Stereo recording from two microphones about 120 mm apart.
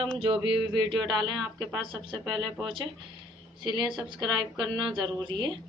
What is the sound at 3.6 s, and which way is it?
Speech, 35° right (ahead or behind).